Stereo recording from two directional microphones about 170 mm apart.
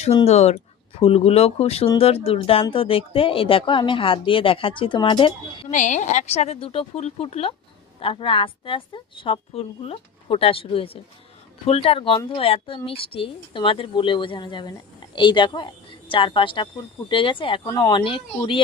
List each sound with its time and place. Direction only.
0.3 s speech: 40° left (ahead or behind)
5.7 s speech: 45° left (ahead or behind); by 17.6 s 30° left (ahead or behind)
17.7 s speech: 20° left (ahead or behind)